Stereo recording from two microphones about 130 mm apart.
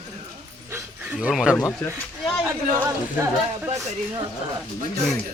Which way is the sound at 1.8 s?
15° left (ahead or behind).